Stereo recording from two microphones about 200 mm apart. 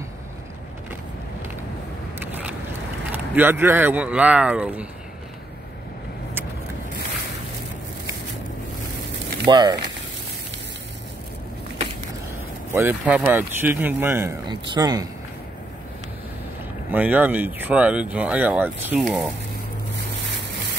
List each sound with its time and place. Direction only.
2.1 s vehicle: 10° right (ahead or behind)
3.1 s speech: 10° right (ahead or behind)
9.5 s speech: 20° right (ahead or behind)
12.7 s speech: 10° right (ahead or behind)
16.9 s speech: 10° right (ahead or behind)